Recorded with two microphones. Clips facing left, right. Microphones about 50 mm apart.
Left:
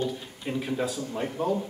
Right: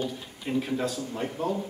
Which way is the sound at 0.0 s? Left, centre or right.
Centre.